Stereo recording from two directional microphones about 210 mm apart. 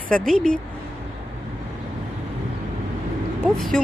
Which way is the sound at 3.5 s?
Centre (ahead or behind).